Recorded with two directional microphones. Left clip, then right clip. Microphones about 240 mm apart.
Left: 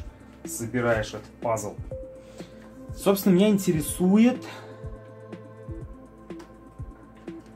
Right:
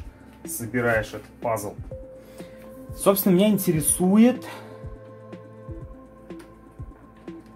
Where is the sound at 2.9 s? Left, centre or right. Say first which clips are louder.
Right 2 dB; right.